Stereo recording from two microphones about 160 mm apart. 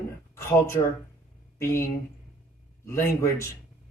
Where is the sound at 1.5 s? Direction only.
20° left (ahead or behind).